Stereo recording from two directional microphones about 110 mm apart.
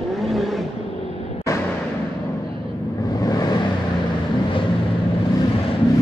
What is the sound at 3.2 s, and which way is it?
Vehicle, 35° left (ahead or behind).